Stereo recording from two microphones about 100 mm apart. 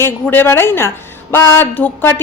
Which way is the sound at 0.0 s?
20° left (ahead or behind).